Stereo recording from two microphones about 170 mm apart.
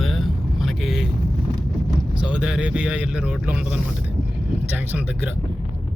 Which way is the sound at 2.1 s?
5° right (ahead or behind).